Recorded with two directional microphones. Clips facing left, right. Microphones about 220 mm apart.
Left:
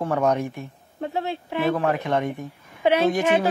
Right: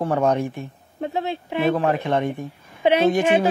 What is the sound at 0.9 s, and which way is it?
Speech, 20° right (ahead or behind).